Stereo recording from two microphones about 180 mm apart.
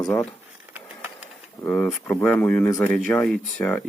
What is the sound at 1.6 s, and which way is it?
Speech, 10° left (ahead or behind).